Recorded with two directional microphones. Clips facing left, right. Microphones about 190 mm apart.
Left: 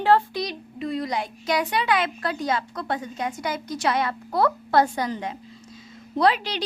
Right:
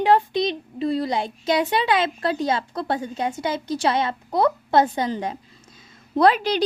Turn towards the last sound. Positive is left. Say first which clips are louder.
# right 4 dB
turn(degrees=-45)  # may be behind; listen again after turning